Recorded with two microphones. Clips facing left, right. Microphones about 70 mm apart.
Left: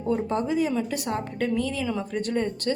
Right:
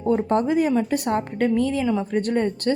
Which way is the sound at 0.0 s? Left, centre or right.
Right.